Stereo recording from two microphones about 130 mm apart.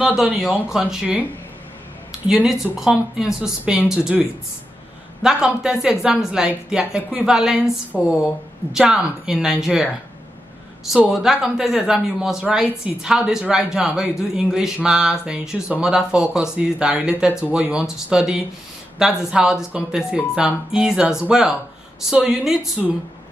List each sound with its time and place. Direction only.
0.0 s speech: 5° right (ahead or behind)
2.2 s speech: 5° right (ahead or behind)